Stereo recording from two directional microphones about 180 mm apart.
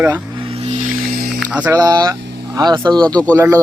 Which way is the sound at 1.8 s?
20° right (ahead or behind).